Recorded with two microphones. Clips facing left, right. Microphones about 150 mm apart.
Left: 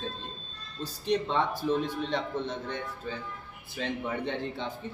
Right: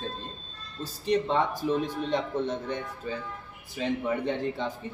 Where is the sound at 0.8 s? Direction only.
10° right (ahead or behind).